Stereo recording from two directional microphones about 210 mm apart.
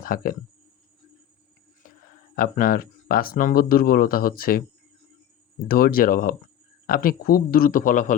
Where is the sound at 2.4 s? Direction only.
40° left (ahead or behind).